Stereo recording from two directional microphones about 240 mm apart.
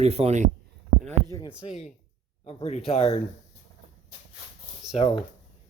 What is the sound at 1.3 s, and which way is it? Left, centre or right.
Speech, centre.